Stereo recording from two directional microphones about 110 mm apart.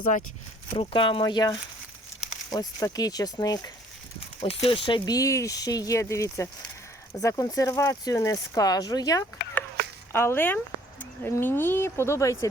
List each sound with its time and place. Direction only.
0.8 s speech: 50° left (ahead or behind)
1.2 s speech: 35° left (ahead or behind)
4.4 s speech: 55° left (ahead or behind); by 9.2 s 35° left (ahead or behind)
10.1 s speech: 20° left (ahead or behind)